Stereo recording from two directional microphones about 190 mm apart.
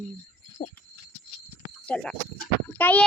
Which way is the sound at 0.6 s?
25° left (ahead or behind).